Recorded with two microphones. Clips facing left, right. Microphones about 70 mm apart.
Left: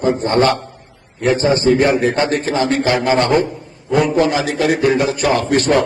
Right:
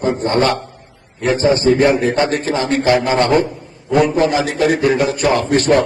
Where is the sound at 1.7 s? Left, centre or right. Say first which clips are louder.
Right 1 dB; left.